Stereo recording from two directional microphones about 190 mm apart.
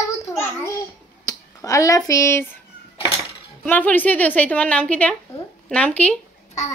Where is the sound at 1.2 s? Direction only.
15° left (ahead or behind).